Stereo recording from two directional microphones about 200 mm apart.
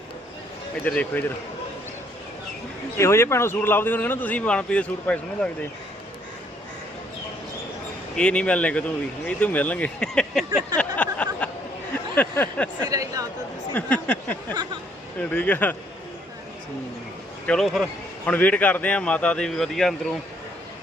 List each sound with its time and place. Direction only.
0.9 s speech: 5° left (ahead or behind)
3.0 s speech: 15° left (ahead or behind)
8.1 s speech: 5° left (ahead or behind)
10.8 s a sound: 5° left (ahead or behind)
12.1 s speech: 10° left (ahead or behind)
12.9 s speech: 15° right (ahead or behind)
13.7 s a sound: 5° left (ahead or behind)
15.2 s speech: 5° left (ahead or behind)
17.4 s speech: 5° left (ahead or behind)